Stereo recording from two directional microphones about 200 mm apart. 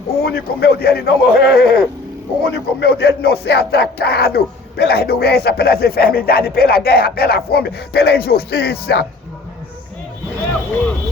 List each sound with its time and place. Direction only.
0.2 s speech: 50° left (ahead or behind)